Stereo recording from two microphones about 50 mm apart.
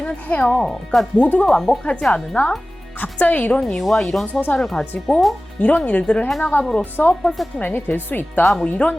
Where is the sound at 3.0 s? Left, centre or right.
Left.